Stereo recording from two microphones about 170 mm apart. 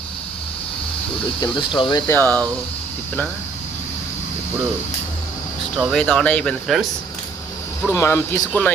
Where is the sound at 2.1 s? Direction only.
10° left (ahead or behind).